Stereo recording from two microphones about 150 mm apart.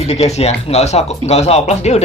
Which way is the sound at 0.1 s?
45° left (ahead or behind).